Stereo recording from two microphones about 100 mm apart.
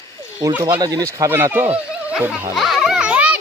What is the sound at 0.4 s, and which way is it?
Speech, 45° right (ahead or behind).